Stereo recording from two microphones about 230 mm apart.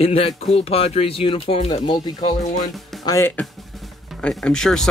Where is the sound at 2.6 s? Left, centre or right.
Centre.